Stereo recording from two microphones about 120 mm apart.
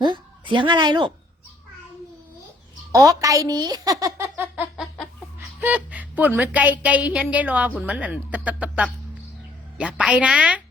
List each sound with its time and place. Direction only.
0.0 s a woman's voice: 40° right (ahead or behind)
2.9 s a woman's voice: 30° right (ahead or behind)
4.2 s a sound: 20° right (ahead or behind)
5.5 s a woman's voice: 10° right (ahead or behind)